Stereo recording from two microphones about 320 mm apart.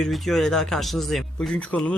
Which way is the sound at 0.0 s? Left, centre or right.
Centre.